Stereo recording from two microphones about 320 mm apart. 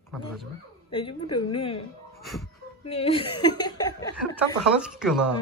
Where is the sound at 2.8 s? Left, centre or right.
Centre.